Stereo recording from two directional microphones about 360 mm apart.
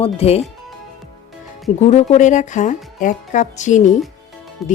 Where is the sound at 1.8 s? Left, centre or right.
Centre.